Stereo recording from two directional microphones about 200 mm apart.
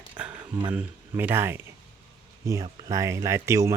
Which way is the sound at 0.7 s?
10° right (ahead or behind).